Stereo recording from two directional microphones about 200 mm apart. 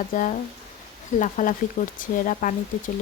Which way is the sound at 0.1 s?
40° left (ahead or behind).